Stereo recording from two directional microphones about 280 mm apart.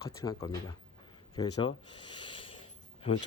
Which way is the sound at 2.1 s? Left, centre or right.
Centre.